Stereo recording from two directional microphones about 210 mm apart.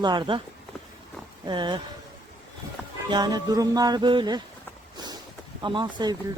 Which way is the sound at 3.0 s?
20° right (ahead or behind).